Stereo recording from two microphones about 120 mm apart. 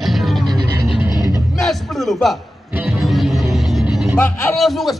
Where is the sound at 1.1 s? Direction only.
35° left (ahead or behind).